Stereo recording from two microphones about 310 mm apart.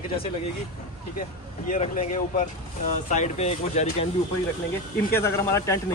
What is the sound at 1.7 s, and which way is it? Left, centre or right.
Speech, left.